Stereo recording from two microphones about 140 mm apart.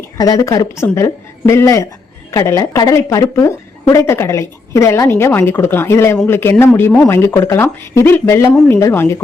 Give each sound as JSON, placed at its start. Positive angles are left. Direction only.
{"t": 0.2, "sound": "a woman's voice", "side_deg": 25}